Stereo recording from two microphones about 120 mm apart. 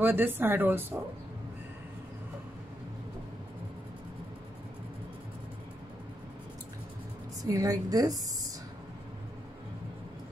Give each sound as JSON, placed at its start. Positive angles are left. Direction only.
{"t": 0.0, "sound": "speech", "side_deg": -15}
{"t": 7.4, "sound": "a woman's voice", "side_deg": -30}